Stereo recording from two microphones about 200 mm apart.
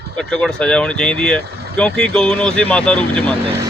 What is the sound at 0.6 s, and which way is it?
Speech, 5° left (ahead or behind).